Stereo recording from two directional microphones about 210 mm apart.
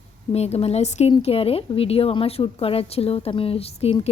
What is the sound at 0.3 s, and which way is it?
Speech, 30° left (ahead or behind).